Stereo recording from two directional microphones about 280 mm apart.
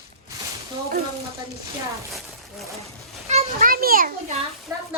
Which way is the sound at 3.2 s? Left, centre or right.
Right.